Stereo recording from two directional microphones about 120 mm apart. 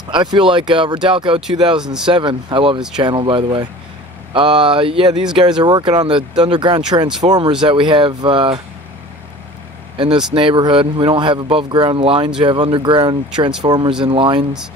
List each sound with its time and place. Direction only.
0.1 s speech: 40° right (ahead or behind)
9.9 s speech: 45° right (ahead or behind)